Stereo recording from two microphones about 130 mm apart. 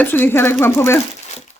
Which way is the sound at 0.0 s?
15° left (ahead or behind).